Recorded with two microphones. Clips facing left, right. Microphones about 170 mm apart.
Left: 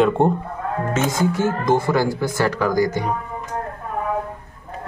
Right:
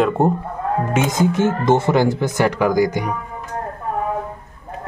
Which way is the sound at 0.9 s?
20° right (ahead or behind).